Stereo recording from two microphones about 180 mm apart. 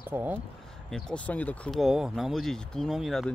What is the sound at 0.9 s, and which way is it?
Speech, 5° left (ahead or behind).